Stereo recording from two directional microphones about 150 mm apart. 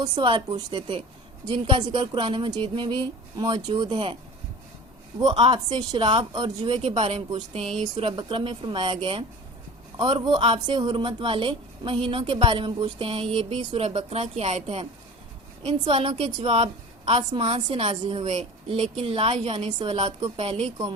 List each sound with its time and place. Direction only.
0.0 s speech: 35° right (ahead or behind)
5.3 s speech: 30° right (ahead or behind)
7.6 s speech: centre (ahead or behind)
8.1 s speech: 30° right (ahead or behind)